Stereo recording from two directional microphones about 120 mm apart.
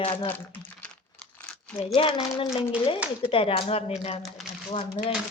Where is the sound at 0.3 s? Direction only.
15° left (ahead or behind).